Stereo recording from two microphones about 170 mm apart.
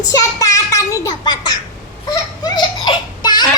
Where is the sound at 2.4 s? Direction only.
25° left (ahead or behind).